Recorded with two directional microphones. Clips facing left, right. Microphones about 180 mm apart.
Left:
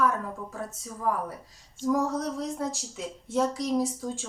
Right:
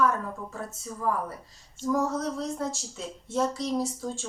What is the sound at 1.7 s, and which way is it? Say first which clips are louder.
Speech: left 1 dB; 15° left (ahead or behind).